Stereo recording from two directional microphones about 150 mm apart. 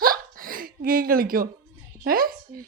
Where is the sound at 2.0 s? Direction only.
80° right.